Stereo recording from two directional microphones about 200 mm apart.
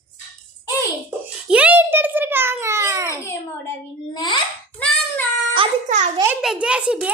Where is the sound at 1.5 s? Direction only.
5° right (ahead or behind).